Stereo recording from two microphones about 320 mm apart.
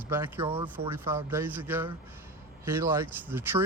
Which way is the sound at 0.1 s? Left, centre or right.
Centre.